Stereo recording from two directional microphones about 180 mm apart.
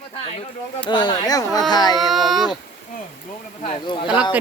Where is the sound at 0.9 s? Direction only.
25° left (ahead or behind).